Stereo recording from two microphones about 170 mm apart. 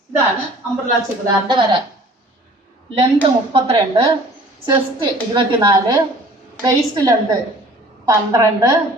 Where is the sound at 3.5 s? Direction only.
35° right (ahead or behind).